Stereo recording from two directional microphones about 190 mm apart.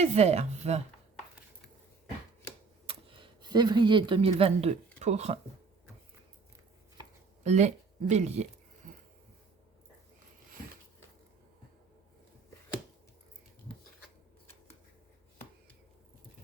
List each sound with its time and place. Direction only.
0.0 s speech: 35° right (ahead or behind)
2.8 s speech: 25° right (ahead or behind)
7.4 s speech: 35° right (ahead or behind)
8.8 s wheeze: 40° right (ahead or behind)